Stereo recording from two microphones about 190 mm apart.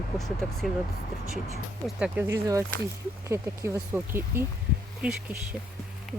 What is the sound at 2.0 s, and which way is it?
Speech, 10° right (ahead or behind).